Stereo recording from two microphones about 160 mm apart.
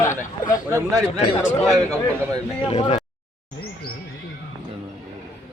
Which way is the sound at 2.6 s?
35° left (ahead or behind).